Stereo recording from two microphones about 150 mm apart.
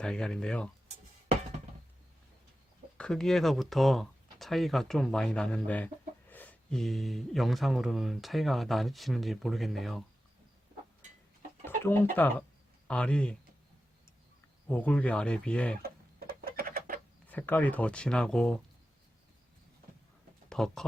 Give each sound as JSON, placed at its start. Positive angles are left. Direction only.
{"t": 0.0, "sound": "speech", "side_deg": 5}
{"t": 3.0, "sound": "speech", "side_deg": 5}
{"t": 11.6, "sound": "speech", "side_deg": 15}
{"t": 14.7, "sound": "speech", "side_deg": 10}
{"t": 15.8, "sound": "a sound", "side_deg": -85}
{"t": 17.2, "sound": "speech", "side_deg": 10}
{"t": 20.5, "sound": "speech", "side_deg": 5}